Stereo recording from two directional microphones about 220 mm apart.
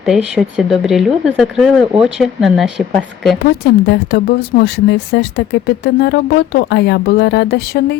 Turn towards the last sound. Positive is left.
turn(degrees=50)  # may be behind; listen again after turning